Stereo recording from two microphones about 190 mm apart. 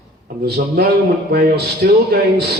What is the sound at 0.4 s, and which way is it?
A man's voice, 55° right (ahead or behind).